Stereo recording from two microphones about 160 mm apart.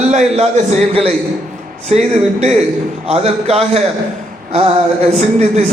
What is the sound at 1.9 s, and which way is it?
A man's voice, 40° right (ahead or behind).